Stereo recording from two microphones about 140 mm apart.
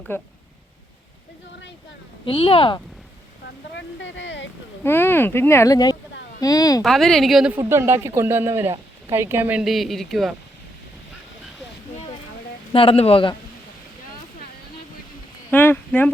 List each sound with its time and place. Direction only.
0.1 s speech: 15° left (ahead or behind)
2.2 s speech: 40° left (ahead or behind)
4.8 s speech: 15° left (ahead or behind)
6.8 s a woman's voice: centre (ahead or behind)
7.5 s a woman's voice: 20° right (ahead or behind); by 10.3 s centre (ahead or behind)
12.7 s speech: 40° left (ahead or behind)
15.4 s a sound: 15° left (ahead or behind)